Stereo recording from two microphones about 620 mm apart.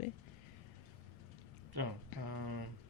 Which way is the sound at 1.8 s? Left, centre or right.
Right.